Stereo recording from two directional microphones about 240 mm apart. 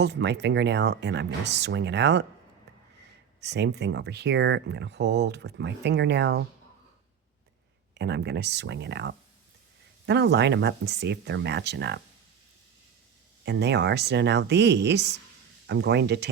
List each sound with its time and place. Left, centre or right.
0.0 s speech: right
3.4 s speech: right
7.9 s speech: right
13.4 s speech: right